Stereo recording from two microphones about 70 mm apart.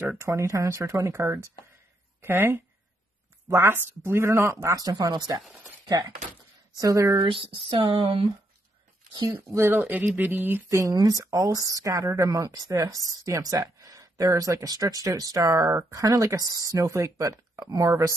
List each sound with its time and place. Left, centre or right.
0.2 s speech: right
4.7 s speech: right
5.9 s speech: right
6.7 s speech: right
9.5 s speech: right
10.7 s speech: right